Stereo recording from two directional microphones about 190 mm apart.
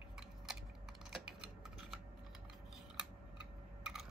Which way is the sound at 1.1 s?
5° right (ahead or behind).